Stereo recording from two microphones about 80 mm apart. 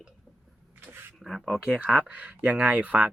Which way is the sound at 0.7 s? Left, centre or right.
Right.